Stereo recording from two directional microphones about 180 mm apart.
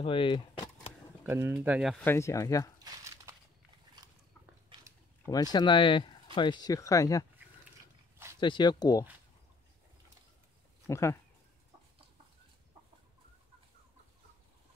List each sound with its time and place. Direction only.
0.0 s speech: 30° left (ahead or behind)
1.2 s speech: 15° right (ahead or behind)
2.0 s speech: 15° left (ahead or behind)
2.8 s crumpling: 15° right (ahead or behind)
5.2 s speech: 20° left (ahead or behind)
8.4 s speech: 25° left (ahead or behind)
10.9 s speech: 15° left (ahead or behind)